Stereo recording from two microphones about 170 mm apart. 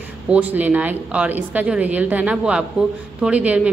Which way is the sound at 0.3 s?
10° right (ahead or behind).